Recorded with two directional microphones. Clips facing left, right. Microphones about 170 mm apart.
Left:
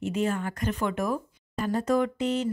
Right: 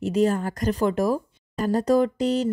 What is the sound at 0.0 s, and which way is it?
A woman's voice, 35° right (ahead or behind).